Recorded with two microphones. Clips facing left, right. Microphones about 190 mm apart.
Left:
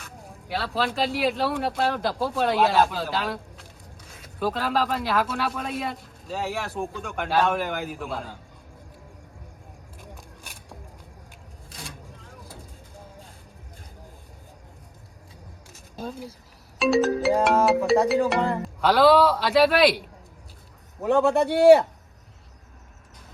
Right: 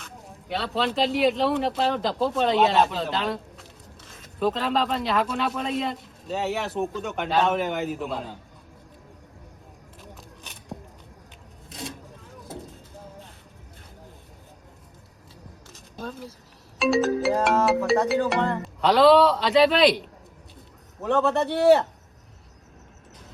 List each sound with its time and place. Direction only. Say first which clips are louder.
0.0 s speech: even; centre (ahead or behind)
10.0 s a sound: even; 10° left (ahead or behind)
11.7 s vehicle: right 6 dB; 20° right (ahead or behind)
16.7 s music: left 1 dB; centre (ahead or behind)
18.1 s a man's voice: left 1 dB; centre (ahead or behind)
21.4 s speech: left 4 dB; centre (ahead or behind)